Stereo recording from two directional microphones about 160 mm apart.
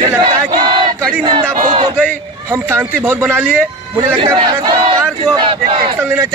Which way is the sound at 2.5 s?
15° right (ahead or behind).